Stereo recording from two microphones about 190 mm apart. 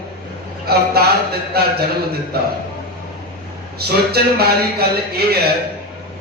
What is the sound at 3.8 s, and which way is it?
Speech, 55° right (ahead or behind).